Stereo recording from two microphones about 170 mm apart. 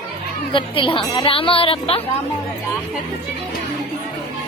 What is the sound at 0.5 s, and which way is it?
Speech, 30° left (ahead or behind).